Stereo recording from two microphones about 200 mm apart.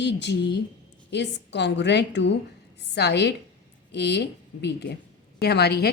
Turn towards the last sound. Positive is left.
turn(degrees=55)  # may be behind; listen again after turning